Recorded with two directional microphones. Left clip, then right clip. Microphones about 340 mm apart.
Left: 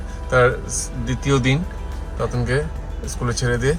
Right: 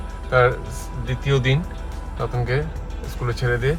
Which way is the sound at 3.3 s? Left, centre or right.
Centre.